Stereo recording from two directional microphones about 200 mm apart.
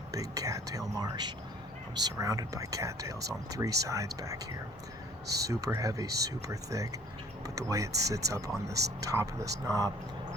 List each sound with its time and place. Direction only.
0.1 s speech: 15° right (ahead or behind)
5.5 s speech: 15° right (ahead or behind)